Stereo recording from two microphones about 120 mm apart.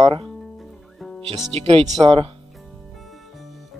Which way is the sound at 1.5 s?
50° right (ahead or behind).